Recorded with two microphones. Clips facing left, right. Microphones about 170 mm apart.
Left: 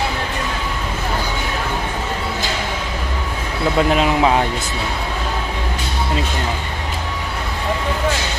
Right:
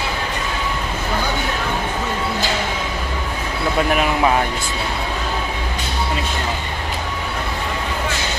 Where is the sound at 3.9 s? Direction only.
20° left (ahead or behind).